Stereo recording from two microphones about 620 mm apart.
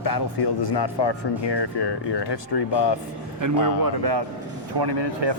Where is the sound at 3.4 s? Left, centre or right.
Right.